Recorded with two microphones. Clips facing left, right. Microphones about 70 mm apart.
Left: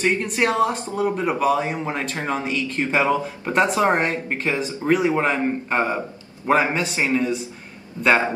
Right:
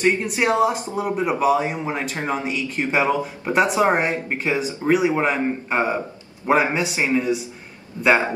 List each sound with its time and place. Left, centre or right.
0.0 s speech: centre
8.0 s a man's voice: right